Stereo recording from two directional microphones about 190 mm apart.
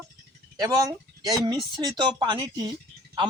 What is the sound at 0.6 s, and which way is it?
Speech, 20° right (ahead or behind).